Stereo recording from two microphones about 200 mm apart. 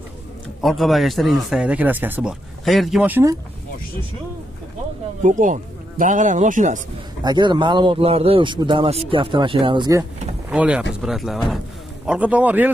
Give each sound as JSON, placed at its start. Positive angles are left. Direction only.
{"t": 0.6, "sound": "a man's voice", "side_deg": 0}
{"t": 5.2, "sound": "speech", "side_deg": -40}
{"t": 7.2, "sound": "speech", "side_deg": -20}
{"t": 10.5, "sound": "a man's voice", "side_deg": -5}